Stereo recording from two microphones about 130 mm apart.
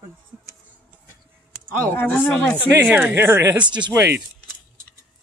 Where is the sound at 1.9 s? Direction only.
15° left (ahead or behind).